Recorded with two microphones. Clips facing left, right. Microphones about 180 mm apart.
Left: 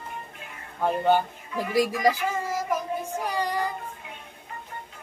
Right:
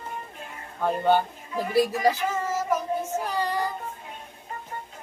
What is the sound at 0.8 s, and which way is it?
Speech, 15° left (ahead or behind).